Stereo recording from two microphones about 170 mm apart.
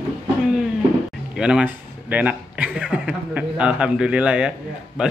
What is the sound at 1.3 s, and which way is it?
A man's voice, 5° right (ahead or behind).